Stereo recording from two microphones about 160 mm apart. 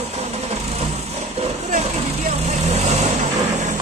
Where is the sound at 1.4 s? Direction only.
45° right (ahead or behind).